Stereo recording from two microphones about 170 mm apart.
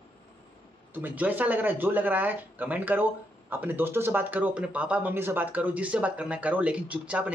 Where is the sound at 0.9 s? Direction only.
10° right (ahead or behind).